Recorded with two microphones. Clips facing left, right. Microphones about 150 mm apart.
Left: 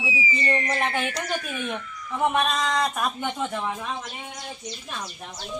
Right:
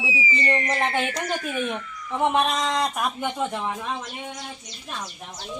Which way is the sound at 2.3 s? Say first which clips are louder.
Right 1 dB; 25° right (ahead or behind).